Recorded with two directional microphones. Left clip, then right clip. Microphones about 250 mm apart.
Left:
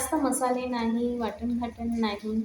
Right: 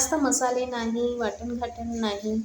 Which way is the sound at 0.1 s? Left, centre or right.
Right.